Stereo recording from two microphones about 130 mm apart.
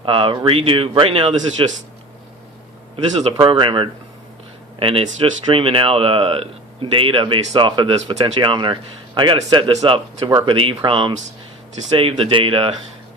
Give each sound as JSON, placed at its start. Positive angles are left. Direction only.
{"t": 0.0, "sound": "speech", "side_deg": -45}
{"t": 3.4, "sound": "speech", "side_deg": -40}
{"t": 10.2, "sound": "speech", "side_deg": -30}
{"t": 10.4, "sound": "speech", "side_deg": -40}